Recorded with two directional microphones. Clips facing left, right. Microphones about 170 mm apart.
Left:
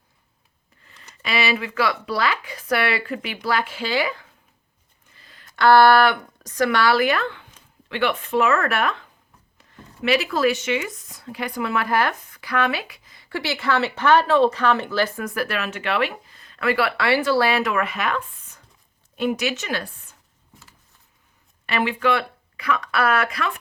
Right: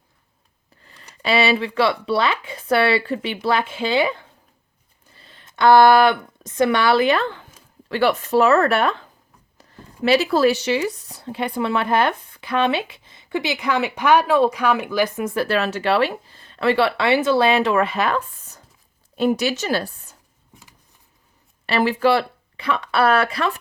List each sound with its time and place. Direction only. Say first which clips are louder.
0.9 s speech: right 8 dB; 35° right (ahead or behind)
5.1 s speech: right 1 dB; 30° right (ahead or behind)
20.5 s a sound: right 1 dB; 15° right (ahead or behind)
21.7 s speech: right 4 dB; 35° right (ahead or behind)